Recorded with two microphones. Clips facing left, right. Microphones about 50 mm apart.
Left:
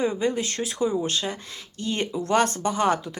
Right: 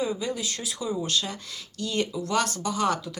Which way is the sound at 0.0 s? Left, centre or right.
Left.